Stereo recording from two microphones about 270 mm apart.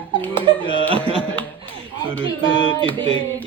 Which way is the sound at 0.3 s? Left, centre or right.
Centre.